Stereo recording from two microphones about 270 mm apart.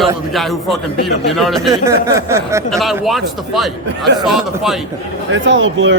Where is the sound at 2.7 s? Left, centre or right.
Centre.